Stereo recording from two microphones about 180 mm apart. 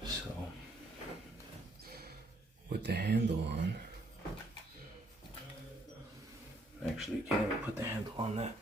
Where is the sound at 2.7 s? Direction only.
70° right (ahead or behind).